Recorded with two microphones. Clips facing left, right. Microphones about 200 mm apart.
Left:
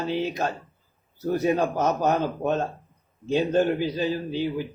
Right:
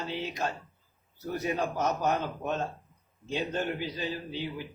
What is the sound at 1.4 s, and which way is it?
Speech, 50° left (ahead or behind).